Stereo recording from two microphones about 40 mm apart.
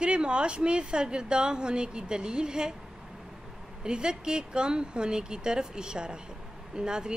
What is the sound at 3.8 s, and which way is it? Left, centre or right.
Speech, right.